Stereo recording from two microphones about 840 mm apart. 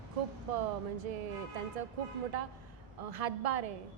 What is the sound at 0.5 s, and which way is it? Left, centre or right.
Speech, right.